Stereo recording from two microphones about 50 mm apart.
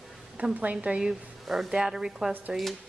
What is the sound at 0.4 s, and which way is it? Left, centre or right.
Speech, right.